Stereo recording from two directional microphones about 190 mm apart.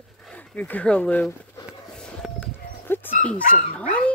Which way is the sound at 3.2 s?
5° left (ahead or behind).